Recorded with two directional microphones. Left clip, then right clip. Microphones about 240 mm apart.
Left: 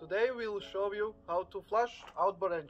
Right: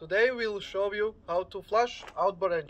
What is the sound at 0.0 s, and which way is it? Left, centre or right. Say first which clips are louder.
Speech: right 6 dB; centre.